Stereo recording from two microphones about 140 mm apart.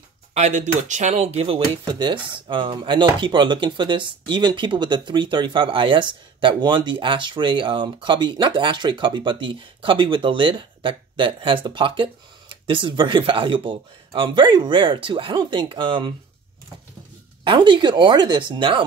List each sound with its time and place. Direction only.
0.3 s speech: 55° right (ahead or behind); by 16.1 s 35° right (ahead or behind)
17.5 s speech: 35° right (ahead or behind)